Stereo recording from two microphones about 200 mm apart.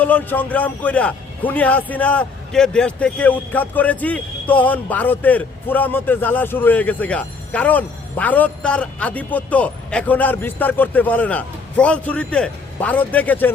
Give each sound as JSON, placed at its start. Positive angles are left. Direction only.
{"t": 0.0, "sound": "a man's voice", "side_deg": 10}